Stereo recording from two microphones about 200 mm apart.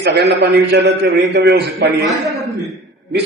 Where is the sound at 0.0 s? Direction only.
55° right (ahead or behind).